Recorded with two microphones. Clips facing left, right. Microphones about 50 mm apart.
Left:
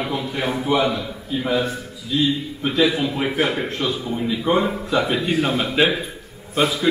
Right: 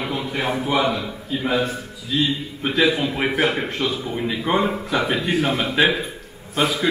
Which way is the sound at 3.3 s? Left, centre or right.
Right.